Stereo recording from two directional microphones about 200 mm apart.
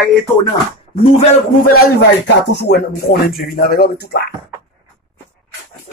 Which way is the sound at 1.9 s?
60° left (ahead or behind).